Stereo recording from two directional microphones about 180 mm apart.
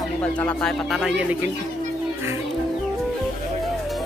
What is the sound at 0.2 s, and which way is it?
Speech, 5° left (ahead or behind).